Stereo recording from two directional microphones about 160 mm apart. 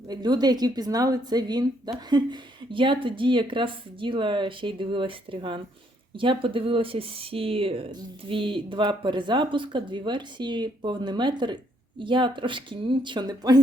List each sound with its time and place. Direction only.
0.1 s speech: 25° right (ahead or behind)